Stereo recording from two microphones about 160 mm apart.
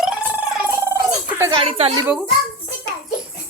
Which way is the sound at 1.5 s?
35° right (ahead or behind).